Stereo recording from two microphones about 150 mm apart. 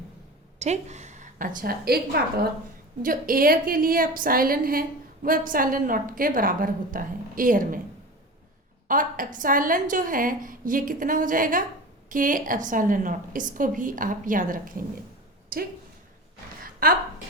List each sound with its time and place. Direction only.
0.6 s a woman's voice: 50° right (ahead or behind); by 2.5 s 90° right
3.0 s a woman's voice: 70° right (ahead or behind)
8.9 s a woman's voice: 60° right (ahead or behind)
16.8 s a woman's voice: 70° right (ahead or behind)